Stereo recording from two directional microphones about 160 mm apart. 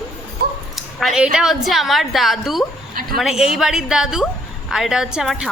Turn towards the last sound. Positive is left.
turn(degrees=-5)  # may be behind; listen again after turning